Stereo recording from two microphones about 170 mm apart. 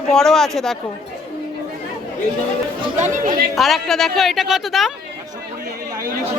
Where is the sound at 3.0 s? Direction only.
45° right (ahead or behind).